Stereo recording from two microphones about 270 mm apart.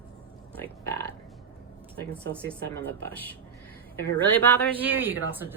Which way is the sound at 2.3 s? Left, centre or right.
Centre.